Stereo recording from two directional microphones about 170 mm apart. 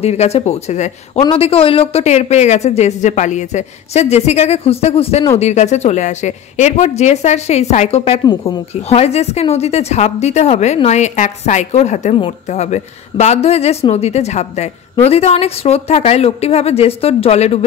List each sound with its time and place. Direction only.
0.0 s a man's voice: 40° left (ahead or behind)